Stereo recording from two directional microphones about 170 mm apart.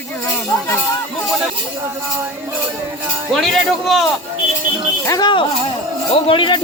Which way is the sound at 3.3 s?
Centre (ahead or behind).